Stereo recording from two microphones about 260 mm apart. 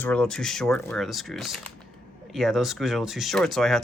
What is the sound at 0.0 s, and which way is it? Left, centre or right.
Speech, centre.